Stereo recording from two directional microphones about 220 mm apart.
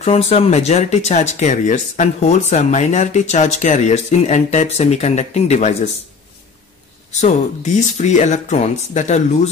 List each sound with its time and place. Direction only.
0.0 s speech: 30° left (ahead or behind)
7.1 s speech: 30° left (ahead or behind)